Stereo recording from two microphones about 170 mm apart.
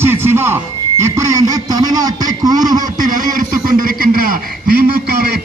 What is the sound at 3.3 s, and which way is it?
Speech, 55° right (ahead or behind).